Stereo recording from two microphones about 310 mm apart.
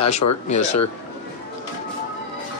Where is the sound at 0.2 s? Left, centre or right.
Left.